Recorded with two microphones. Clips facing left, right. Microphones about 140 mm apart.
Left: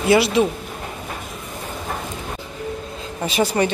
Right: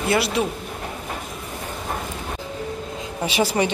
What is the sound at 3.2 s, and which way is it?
Speech, 10° right (ahead or behind).